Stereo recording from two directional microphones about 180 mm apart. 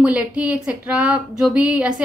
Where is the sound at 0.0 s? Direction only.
5° right (ahead or behind).